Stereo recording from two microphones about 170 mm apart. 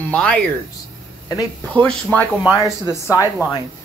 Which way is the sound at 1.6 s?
10° left (ahead or behind).